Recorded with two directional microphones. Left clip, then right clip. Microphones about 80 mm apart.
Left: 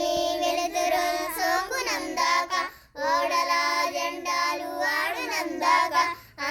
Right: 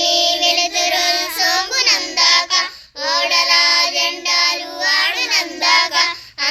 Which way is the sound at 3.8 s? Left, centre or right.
Left.